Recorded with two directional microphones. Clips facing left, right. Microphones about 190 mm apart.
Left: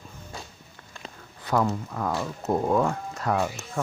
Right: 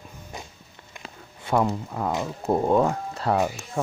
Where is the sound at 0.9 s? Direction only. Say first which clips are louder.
Even; 20° right (ahead or behind).